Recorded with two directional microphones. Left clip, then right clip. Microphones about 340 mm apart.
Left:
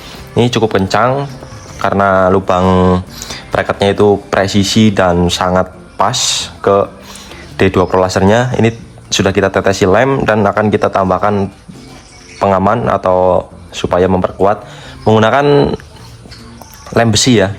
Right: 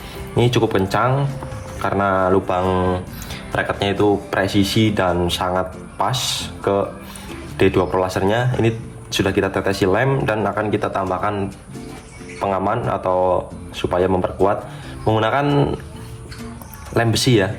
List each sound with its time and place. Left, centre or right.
0.3 s speech: left
12.7 s speech: left
16.9 s speech: left